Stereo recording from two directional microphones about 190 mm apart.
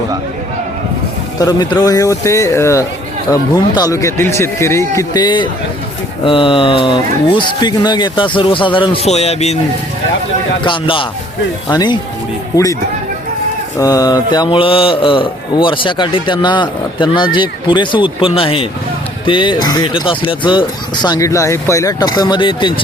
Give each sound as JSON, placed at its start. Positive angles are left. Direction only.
{"t": 1.4, "sound": "a man's voice", "side_deg": 20}
{"t": 10.6, "sound": "speech", "side_deg": 25}
{"t": 13.7, "sound": "speech", "side_deg": 20}